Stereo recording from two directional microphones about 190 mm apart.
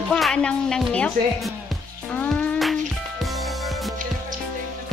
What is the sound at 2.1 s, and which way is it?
Music, 5° left (ahead or behind).